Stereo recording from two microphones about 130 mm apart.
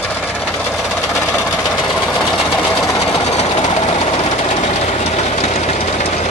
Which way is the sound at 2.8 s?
30° left (ahead or behind).